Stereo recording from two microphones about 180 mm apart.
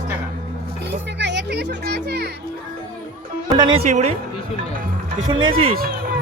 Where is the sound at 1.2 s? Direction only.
75° right (ahead or behind).